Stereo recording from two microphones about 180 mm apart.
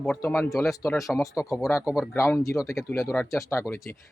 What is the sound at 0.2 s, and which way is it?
Speech, 15° left (ahead or behind).